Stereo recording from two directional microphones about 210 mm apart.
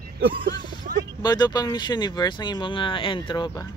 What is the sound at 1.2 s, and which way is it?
Speech, 20° left (ahead or behind).